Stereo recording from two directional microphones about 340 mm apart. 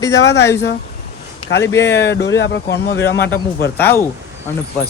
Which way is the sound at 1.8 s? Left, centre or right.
Left.